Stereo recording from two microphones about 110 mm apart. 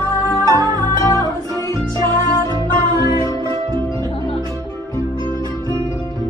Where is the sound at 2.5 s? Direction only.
35° right (ahead or behind).